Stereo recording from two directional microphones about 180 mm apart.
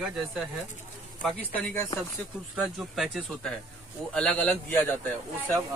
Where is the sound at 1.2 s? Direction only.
Centre (ahead or behind).